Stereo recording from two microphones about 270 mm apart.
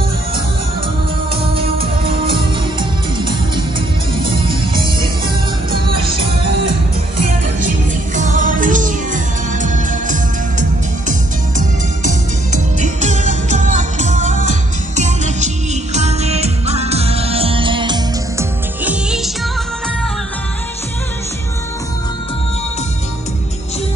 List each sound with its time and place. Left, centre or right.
2.0 s music: centre
4.7 s music: centre
7.6 s music: right; by 19.3 s centre